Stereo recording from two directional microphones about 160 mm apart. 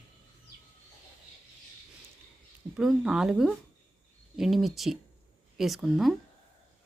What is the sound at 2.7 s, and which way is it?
Speech, 5° right (ahead or behind).